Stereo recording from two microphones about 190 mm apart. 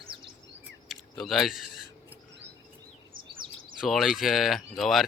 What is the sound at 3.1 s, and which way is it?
Chirp, 45° right (ahead or behind).